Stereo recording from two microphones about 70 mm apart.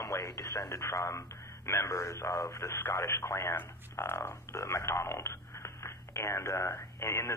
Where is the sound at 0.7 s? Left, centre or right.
Left.